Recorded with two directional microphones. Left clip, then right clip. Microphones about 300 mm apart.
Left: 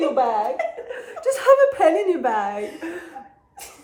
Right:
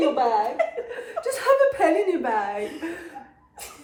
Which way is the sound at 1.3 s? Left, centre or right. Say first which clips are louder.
Left 4 dB; centre.